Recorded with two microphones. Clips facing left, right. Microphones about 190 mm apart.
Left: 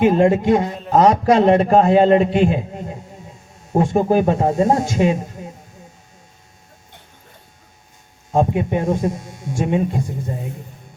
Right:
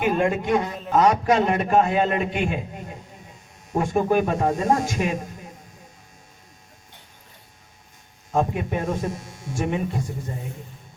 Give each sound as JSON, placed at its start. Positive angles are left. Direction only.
{"t": 0.0, "sound": "a man's voice", "side_deg": 25}
{"t": 8.3, "sound": "speech", "side_deg": 25}